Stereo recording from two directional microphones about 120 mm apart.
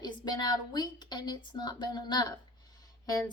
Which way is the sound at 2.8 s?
35° left (ahead or behind).